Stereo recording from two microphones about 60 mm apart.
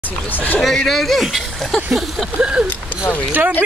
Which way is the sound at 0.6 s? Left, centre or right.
Centre.